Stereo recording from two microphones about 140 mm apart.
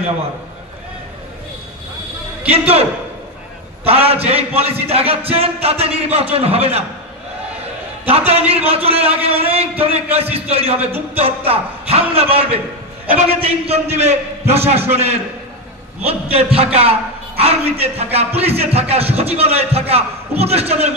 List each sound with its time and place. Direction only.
2.5 s speech: 45° right (ahead or behind)
8.3 s speech: 45° right (ahead or behind)